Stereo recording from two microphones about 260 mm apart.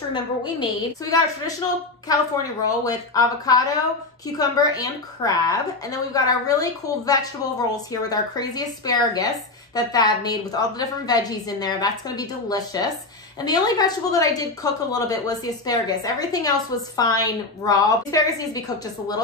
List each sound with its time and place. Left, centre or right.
0.1 s a woman's voice: centre